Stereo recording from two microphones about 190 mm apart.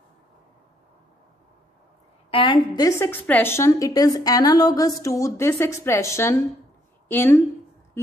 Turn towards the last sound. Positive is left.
turn(degrees=10)  # may be behind; listen again after turning